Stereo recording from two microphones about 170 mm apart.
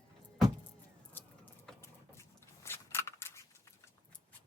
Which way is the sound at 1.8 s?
15° left (ahead or behind).